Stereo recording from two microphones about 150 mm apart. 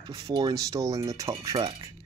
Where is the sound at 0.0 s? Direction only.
25° right (ahead or behind).